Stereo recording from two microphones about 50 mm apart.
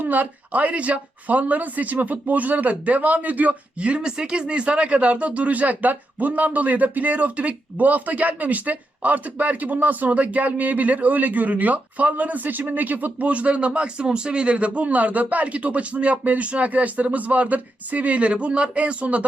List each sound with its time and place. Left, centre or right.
0.0 s speech: right